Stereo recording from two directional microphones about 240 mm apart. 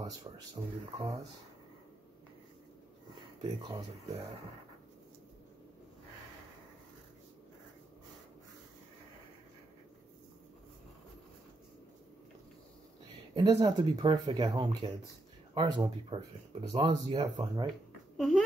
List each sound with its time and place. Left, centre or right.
0.6 s speech: centre
3.2 s speech: right
13.3 s speech: centre
17.6 s a sound: centre